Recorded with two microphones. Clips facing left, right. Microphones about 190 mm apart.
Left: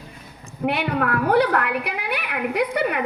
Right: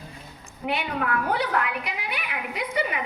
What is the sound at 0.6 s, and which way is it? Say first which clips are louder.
A woman's voice: left 5 dB; 60° left (ahead or behind).